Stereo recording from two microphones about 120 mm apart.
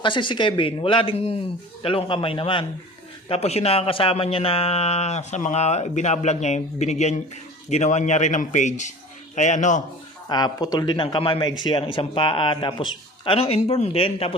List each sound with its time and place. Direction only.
0.0 s speech: 45° left (ahead or behind)
3.2 s speech: 60° left (ahead or behind); by 9.8 s 90° left
10.2 s speech: 35° left (ahead or behind); by 14.3 s 50° left (ahead or behind)